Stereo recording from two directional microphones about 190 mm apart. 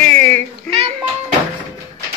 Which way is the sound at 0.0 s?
10° left (ahead or behind).